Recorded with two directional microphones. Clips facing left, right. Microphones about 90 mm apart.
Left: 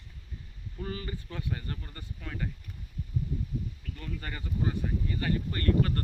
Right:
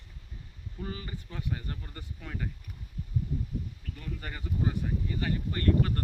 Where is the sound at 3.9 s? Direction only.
10° right (ahead or behind).